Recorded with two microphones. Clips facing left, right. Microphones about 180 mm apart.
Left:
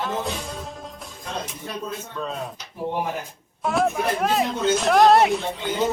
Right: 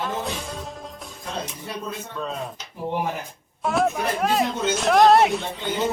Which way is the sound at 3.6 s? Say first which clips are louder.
Even; centre (ahead or behind).